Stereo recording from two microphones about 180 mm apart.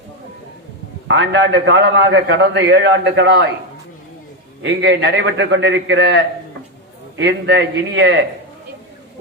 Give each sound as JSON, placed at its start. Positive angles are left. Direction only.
{"t": 1.0, "sound": "a man's voice", "side_deg": -85}
{"t": 4.6, "sound": "a man's voice", "side_deg": -80}
{"t": 7.2, "sound": "a man's voice", "side_deg": -75}